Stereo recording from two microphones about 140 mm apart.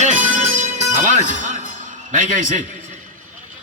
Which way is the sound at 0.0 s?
60° right (ahead or behind).